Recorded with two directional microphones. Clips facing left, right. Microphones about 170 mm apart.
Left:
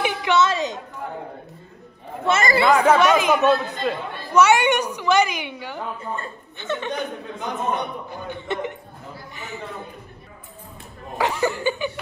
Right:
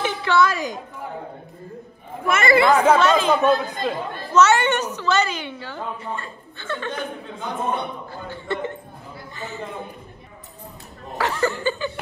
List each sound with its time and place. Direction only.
0.0 s a sound: 15° left (ahead or behind)
2.2 s speech: 30° left (ahead or behind)
2.7 s speech: centre (ahead or behind)
3.0 s a man's voice: 10° left (ahead or behind)
11.1 s speech: 15° left (ahead or behind)